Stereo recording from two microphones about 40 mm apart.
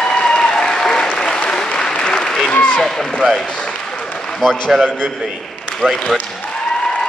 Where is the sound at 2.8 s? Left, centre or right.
Centre.